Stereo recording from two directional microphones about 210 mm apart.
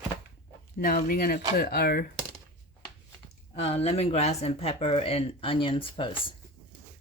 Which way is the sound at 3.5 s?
30° left (ahead or behind).